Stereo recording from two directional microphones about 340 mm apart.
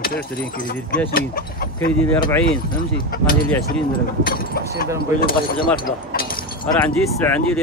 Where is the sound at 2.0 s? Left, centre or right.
Centre.